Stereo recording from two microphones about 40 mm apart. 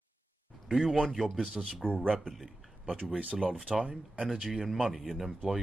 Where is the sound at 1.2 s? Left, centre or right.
Centre.